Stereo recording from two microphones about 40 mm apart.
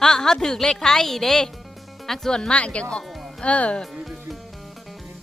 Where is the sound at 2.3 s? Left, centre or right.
Left.